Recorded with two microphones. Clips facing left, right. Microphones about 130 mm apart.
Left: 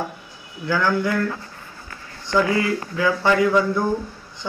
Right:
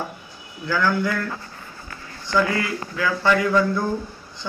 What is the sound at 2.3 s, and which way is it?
Speech, 20° left (ahead or behind).